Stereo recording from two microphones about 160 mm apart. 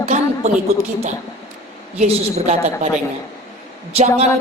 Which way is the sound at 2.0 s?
40° right (ahead or behind).